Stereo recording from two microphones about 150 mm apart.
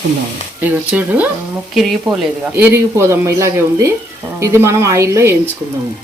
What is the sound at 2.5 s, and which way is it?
Speech, 15° right (ahead or behind).